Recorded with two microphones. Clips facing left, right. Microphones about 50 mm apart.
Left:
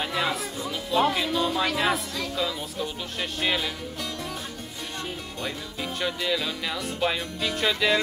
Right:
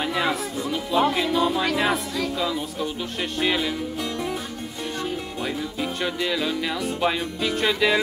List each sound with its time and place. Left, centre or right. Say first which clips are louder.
0.0 s music: right 3 dB; centre
0.7 s speech: right 2 dB; centre
5.4 s speech: right 4 dB; centre